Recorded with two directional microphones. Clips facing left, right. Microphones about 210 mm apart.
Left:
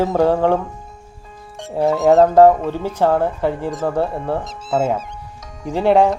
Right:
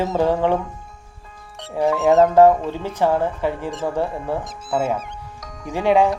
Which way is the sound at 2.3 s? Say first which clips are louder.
Left 2 dB; 10° left (ahead or behind).